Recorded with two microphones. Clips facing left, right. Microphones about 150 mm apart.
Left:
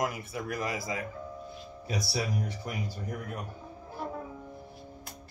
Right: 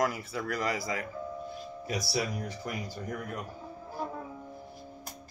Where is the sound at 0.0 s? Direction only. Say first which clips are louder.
Right 2 dB; 20° left (ahead or behind).